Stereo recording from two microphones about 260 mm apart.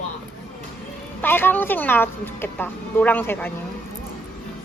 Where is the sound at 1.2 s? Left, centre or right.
Centre.